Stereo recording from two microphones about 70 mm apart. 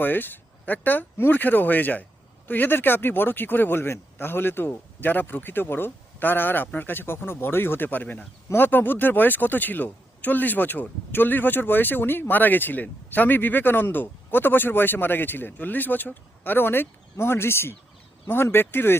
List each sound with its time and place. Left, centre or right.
0.0 s speech: left